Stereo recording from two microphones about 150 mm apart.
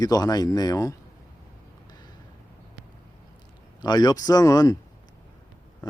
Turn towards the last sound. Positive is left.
turn(degrees=25)  # may be behind; listen again after turning